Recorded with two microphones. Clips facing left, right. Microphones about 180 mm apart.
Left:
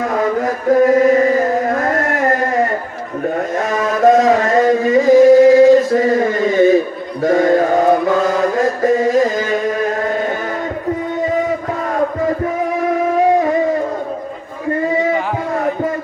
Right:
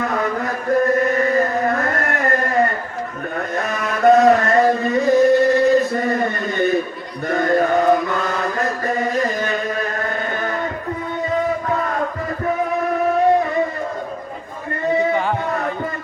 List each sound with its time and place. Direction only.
0.4 s chant: 90° left
4.0 s a sound: 90° left
7.2 s mantra: 90° left
14.8 s music: 90° left